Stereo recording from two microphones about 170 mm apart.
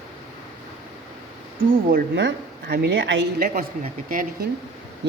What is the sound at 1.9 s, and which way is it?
A woman's voice, 75° right (ahead or behind).